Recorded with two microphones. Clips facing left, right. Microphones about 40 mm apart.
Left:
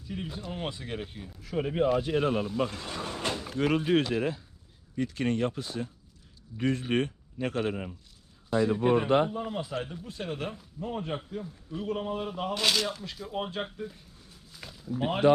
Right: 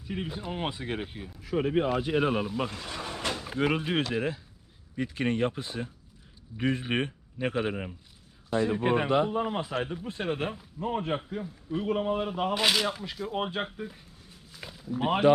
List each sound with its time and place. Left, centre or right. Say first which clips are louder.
0.1 s speech: right 3 dB; centre
4.9 s speech: even; centre
8.4 s a man's voice: left 1 dB; right
9.0 s speech: left 1 dB; left
9.3 s speech: right 4 dB; right